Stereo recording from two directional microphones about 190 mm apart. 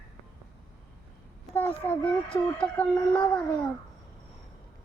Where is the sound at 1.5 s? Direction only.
10° left (ahead or behind).